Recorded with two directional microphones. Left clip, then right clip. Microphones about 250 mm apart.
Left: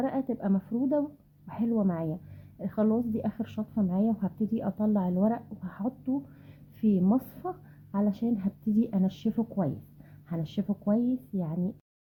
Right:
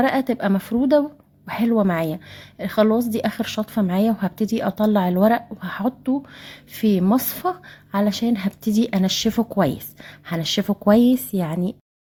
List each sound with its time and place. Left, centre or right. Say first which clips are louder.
0.0 s a woman's voice: right 11 dB; right
10.7 s a woman's voice: right 13 dB; right